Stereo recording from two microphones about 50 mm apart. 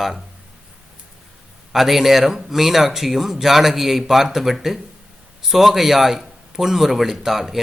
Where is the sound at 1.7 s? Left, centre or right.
Centre.